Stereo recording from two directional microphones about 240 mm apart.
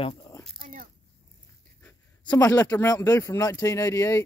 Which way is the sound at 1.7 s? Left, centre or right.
Centre.